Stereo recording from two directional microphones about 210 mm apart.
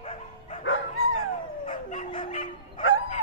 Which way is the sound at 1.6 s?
30° left (ahead or behind).